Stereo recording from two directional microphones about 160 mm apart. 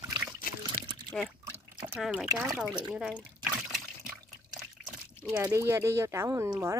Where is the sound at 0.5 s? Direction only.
60° left (ahead or behind).